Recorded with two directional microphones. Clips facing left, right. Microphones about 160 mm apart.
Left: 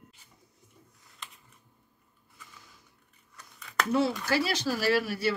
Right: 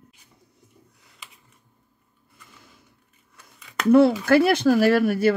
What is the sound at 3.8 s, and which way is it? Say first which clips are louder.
Speech: right 12 dB; 60° right (ahead or behind).